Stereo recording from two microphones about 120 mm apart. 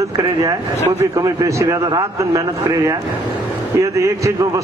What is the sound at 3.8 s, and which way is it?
Speech, 25° right (ahead or behind).